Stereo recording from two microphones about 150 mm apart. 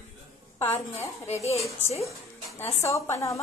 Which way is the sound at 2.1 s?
20° left (ahead or behind).